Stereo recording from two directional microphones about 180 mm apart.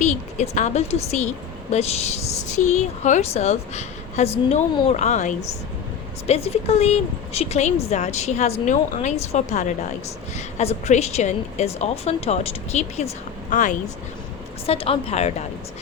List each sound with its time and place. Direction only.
0.0 s a woman's voice: 40° left (ahead or behind)
14.7 s a woman's voice: 35° left (ahead or behind)